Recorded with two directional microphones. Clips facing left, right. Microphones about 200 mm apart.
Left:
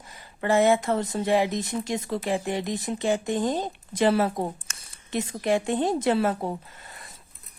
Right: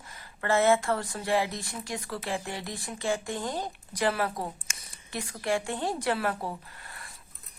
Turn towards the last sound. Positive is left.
turn(degrees=20)  # may be behind; listen again after turning